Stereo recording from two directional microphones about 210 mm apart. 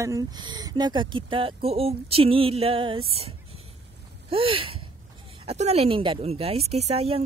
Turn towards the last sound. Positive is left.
turn(degrees=-30)  # may be behind; listen again after turning